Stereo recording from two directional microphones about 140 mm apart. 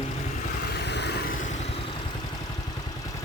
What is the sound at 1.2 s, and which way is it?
Vehicle, 80° left.